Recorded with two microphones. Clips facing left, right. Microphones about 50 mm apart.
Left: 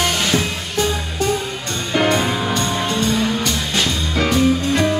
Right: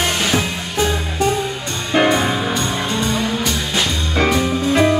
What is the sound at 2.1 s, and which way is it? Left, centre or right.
Music, centre.